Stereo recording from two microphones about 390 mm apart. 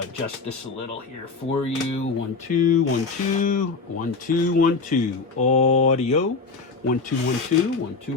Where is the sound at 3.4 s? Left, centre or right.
Centre.